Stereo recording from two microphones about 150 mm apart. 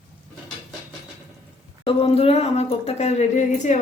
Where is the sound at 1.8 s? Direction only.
40° left (ahead or behind).